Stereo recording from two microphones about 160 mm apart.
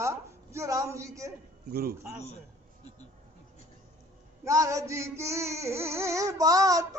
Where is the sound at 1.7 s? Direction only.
70° right (ahead or behind).